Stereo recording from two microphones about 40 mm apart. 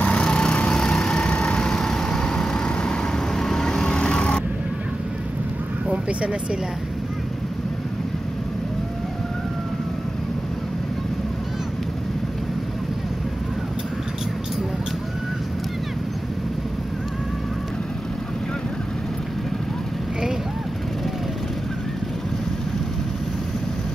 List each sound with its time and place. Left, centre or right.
0.0 s lawn mower: left
0.7 s vehicle: centre
1.7 s vehicle: centre
3.3 s vehicle: centre
5.9 s vehicle: right